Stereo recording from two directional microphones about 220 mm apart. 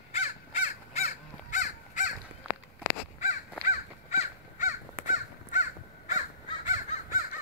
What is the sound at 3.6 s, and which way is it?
Crow, 30° left (ahead or behind).